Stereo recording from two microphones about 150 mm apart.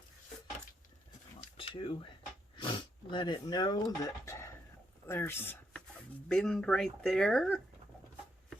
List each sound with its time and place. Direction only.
1.5 s a sound: 35° left (ahead or behind); by 4.5 s 20° left (ahead or behind)
5.0 s speech: 15° left (ahead or behind)
6.2 s speech: 5° left (ahead or behind)